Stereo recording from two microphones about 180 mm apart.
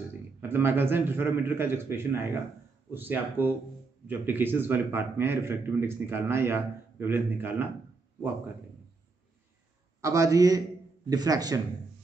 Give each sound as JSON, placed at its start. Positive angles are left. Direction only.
{"t": 0.4, "sound": "a man's voice", "side_deg": -10}
{"t": 10.0, "sound": "a man's voice", "side_deg": -20}